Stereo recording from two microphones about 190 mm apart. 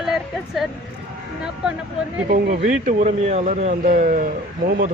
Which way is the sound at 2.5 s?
40° right (ahead or behind).